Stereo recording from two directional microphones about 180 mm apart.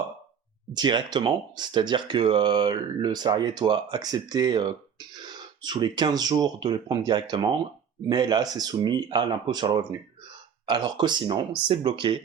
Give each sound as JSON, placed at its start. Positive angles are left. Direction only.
{"t": 0.7, "sound": "speech", "side_deg": -25}